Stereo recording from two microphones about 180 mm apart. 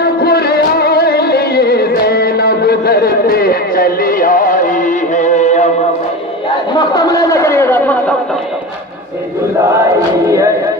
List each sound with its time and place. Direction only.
0.0 s music: 60° left (ahead or behind); by 5.7 s 40° left (ahead or behind)
6.8 s chatter: 20° left (ahead or behind)
10.2 s music: 15° right (ahead or behind)